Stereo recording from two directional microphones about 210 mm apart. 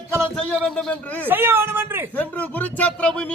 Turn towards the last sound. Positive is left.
turn(degrees=5)  # may be behind; listen again after turning